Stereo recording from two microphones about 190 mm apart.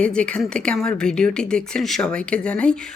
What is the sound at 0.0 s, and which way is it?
A woman's voice, 5° left (ahead or behind).